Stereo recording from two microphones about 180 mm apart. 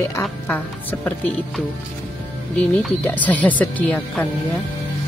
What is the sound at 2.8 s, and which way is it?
A woman's voice, 10° left (ahead or behind).